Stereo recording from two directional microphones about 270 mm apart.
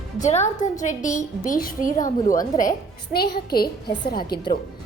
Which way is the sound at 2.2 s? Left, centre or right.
Centre.